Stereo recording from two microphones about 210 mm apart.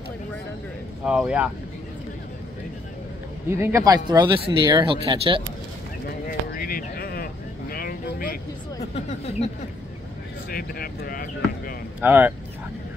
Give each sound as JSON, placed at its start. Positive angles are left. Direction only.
{"t": 1.0, "sound": "speech", "side_deg": -5}
{"t": 3.4, "sound": "speech", "side_deg": -10}
{"t": 6.0, "sound": "a sound", "side_deg": 45}
{"t": 8.9, "sound": "speech", "side_deg": 30}
{"t": 10.5, "sound": "speech", "side_deg": 45}
{"t": 12.0, "sound": "speech", "side_deg": -10}